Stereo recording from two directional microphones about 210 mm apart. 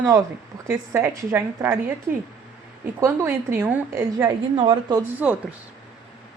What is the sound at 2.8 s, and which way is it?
A woman's voice, 10° right (ahead or behind).